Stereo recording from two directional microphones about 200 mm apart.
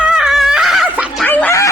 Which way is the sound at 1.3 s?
10° left (ahead or behind).